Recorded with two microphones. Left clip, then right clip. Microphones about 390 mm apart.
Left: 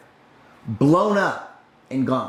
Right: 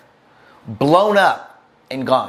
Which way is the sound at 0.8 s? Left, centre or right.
Right.